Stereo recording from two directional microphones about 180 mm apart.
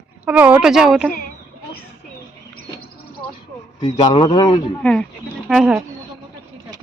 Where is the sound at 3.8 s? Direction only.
25° left (ahead or behind).